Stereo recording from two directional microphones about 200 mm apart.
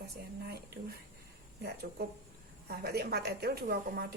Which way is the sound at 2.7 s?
55° right (ahead or behind).